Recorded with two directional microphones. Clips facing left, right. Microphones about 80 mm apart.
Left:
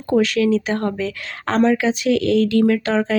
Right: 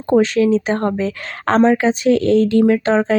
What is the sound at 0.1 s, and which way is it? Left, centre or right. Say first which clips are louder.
Speech: right 3 dB; right.